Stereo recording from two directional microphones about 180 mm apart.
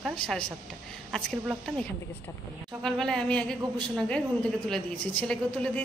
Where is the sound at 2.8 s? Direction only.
5° left (ahead or behind).